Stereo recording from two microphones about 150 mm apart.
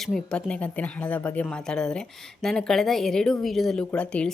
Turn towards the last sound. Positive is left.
turn(degrees=5)  # may be behind; listen again after turning